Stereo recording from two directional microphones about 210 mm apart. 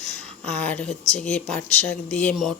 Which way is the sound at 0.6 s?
5° left (ahead or behind).